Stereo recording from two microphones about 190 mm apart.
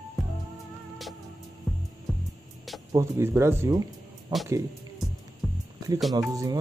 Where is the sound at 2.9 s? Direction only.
15° right (ahead or behind).